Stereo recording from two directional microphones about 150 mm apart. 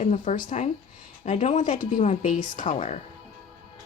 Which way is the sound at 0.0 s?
55° left (ahead or behind).